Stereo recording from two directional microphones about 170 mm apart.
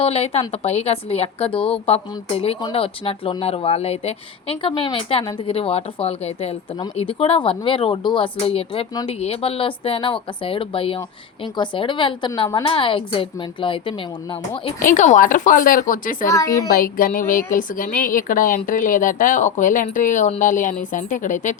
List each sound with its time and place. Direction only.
0.0 s a woman's voice: 35° left (ahead or behind)
14.8 s a woman's voice: 50° left (ahead or behind)
16.3 s a woman's voice: 20° left (ahead or behind)
16.6 s a woman's voice: 55° left (ahead or behind)